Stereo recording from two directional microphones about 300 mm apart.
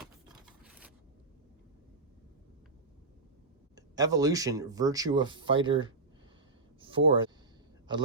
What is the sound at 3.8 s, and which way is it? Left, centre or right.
Speech, centre.